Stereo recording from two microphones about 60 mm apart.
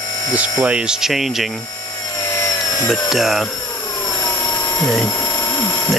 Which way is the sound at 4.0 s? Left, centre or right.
Left.